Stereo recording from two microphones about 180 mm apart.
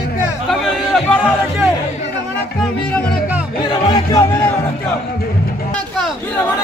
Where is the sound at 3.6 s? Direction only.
25° left (ahead or behind).